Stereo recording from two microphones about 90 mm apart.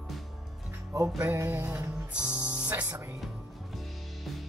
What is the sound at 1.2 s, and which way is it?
Music, 30° right (ahead or behind).